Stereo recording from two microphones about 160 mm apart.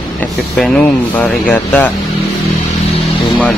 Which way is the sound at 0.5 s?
5° left (ahead or behind).